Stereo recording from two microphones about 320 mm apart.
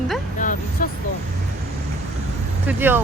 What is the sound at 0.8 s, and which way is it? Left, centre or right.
Vehicle, left.